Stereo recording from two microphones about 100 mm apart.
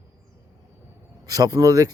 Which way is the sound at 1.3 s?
40° right (ahead or behind).